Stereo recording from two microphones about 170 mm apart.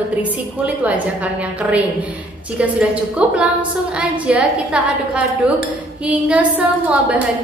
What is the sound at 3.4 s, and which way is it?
A woman's voice, 5° right (ahead or behind).